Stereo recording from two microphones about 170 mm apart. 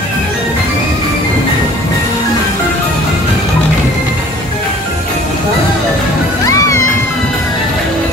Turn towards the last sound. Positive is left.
turn(degrees=20)  # may be behind; listen again after turning